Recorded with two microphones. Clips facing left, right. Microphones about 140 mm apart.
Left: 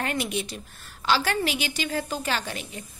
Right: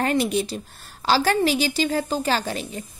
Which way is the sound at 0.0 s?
35° right (ahead or behind).